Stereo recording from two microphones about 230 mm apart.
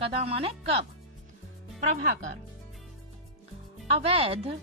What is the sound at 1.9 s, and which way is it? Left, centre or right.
Speech, right.